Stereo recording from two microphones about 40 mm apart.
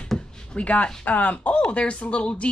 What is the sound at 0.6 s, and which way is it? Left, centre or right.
Speech, left.